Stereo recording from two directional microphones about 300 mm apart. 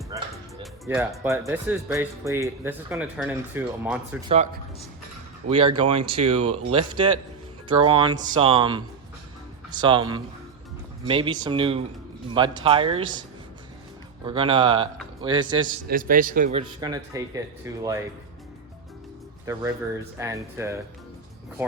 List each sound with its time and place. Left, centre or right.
0.1 s music: centre
0.6 s speech: centre
4.3 s speech: right
14.3 s speech: centre
15.9 s speech: right; by 17.8 s centre
19.5 s speech: centre